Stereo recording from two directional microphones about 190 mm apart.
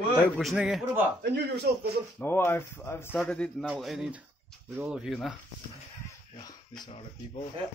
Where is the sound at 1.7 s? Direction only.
55° right (ahead or behind).